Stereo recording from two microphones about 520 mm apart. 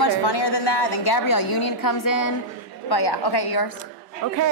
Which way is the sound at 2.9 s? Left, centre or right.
Left.